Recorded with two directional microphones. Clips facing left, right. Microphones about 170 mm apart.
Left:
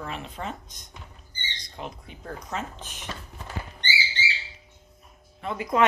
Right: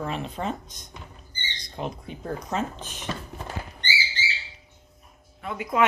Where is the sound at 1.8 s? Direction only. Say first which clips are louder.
Right 6 dB; 30° right (ahead or behind).